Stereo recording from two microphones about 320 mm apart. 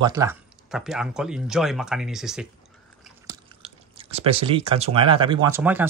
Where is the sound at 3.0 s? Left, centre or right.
Centre.